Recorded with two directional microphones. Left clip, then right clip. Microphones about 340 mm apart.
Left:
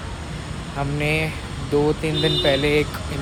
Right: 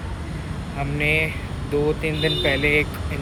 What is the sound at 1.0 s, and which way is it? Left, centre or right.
Speech, centre.